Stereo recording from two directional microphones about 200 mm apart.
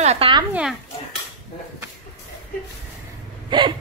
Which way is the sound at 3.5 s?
25° right (ahead or behind).